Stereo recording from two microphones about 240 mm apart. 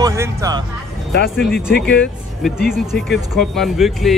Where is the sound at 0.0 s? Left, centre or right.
Centre.